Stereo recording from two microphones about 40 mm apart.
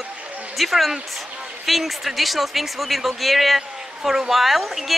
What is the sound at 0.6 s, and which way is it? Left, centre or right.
Speech, centre.